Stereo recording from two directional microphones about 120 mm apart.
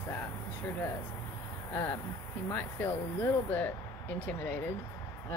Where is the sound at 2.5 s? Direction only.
15° left (ahead or behind).